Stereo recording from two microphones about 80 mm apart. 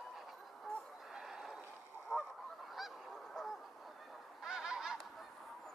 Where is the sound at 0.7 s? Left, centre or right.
Centre.